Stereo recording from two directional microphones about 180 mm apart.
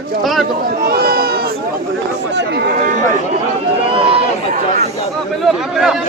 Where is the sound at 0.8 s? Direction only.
60° right (ahead or behind).